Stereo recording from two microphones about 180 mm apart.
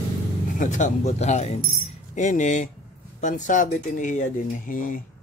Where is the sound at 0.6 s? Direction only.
40° left (ahead or behind).